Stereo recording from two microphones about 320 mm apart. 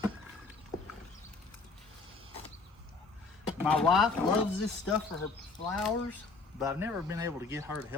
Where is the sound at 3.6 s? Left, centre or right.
Centre.